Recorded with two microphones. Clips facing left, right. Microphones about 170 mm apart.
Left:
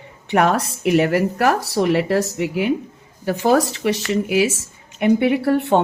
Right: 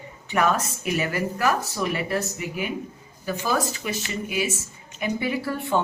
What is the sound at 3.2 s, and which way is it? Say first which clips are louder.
Speech: left 9 dB; 75° left (ahead or behind).